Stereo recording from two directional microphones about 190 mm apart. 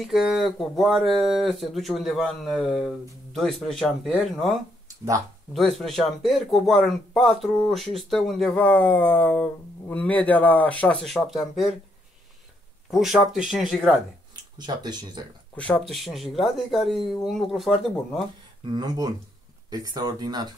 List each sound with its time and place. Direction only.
0.0 s speech: centre (ahead or behind)
12.9 s speech: centre (ahead or behind)
14.3 s speech: 20° right (ahead or behind)
15.5 s speech: 5° left (ahead or behind)
18.6 s speech: 20° right (ahead or behind)